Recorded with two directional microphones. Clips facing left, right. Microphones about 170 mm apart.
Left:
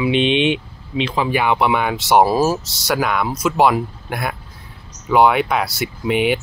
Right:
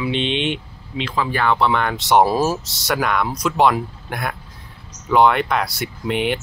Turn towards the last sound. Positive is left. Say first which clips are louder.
# left 4 dB
turn(degrees=5)  # may be behind; listen again after turning